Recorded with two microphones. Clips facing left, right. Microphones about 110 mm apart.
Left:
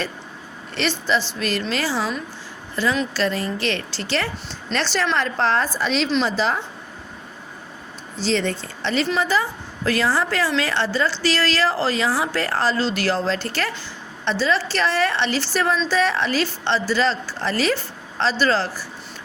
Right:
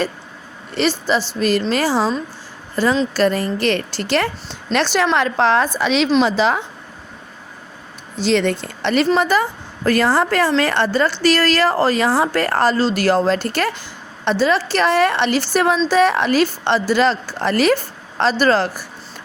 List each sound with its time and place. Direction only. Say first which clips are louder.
0.8 s a woman's voice: right 4 dB; 45° right (ahead or behind); by 6.6 s 70° right (ahead or behind)
8.2 s a woman's voice: right 5 dB; 65° right (ahead or behind)
12.7 s a woman's voice: right 6 dB; 40° right (ahead or behind)